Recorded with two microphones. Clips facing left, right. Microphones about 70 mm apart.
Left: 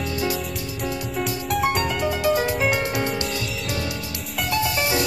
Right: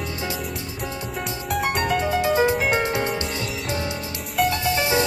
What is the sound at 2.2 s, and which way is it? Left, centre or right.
Music, right.